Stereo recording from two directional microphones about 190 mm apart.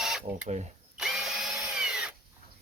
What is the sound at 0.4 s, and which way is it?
Speech, 40° right (ahead or behind).